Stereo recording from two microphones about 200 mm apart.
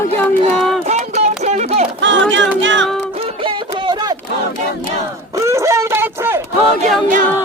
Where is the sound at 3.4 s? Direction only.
25° right (ahead or behind).